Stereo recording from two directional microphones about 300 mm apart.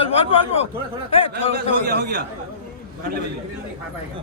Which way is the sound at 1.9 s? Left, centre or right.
Right.